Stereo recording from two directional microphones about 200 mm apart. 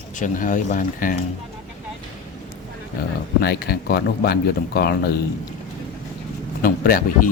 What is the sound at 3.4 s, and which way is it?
Speech, 50° left (ahead or behind).